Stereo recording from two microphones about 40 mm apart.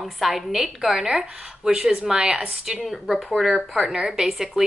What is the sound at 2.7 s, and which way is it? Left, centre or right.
Speech, centre.